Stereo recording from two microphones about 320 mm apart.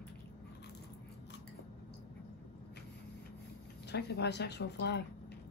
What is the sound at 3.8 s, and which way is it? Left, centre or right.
Speech, left.